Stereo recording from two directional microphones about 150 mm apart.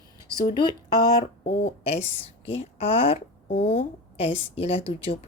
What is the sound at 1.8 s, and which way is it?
A woman's voice, 45° left (ahead or behind).